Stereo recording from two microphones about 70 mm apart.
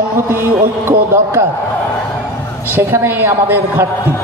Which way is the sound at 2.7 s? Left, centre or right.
Right.